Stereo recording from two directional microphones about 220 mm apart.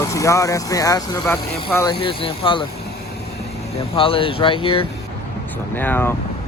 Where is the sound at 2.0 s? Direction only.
25° left (ahead or behind).